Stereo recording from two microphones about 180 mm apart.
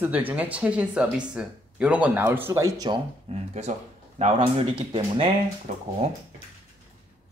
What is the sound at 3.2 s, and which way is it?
Speech, 35° right (ahead or behind).